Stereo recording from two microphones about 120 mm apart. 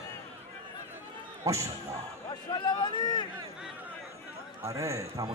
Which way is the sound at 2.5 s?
40° left (ahead or behind).